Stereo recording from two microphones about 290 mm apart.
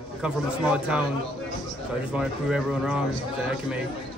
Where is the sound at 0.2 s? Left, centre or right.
Centre.